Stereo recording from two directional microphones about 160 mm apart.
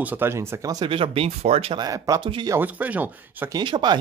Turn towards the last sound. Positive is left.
turn(degrees=-30)  # may be behind; listen again after turning